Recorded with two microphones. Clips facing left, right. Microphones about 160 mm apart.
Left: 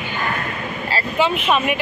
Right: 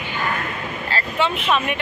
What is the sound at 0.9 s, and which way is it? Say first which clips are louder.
Speech: left 3 dB; 10° left (ahead or behind).